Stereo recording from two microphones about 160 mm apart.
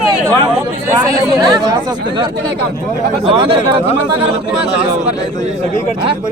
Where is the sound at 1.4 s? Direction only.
25° right (ahead or behind).